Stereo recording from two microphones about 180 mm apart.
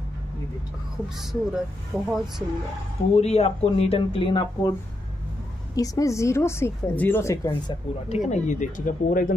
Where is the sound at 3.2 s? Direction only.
35° left (ahead or behind).